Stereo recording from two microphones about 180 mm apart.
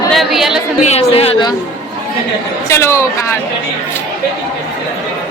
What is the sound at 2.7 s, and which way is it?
Speech, 15° left (ahead or behind).